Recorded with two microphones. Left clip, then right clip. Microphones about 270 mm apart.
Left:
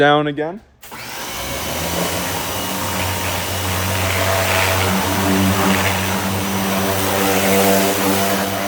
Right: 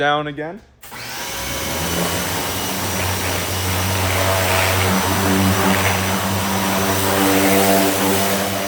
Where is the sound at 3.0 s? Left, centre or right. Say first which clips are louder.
Even; centre.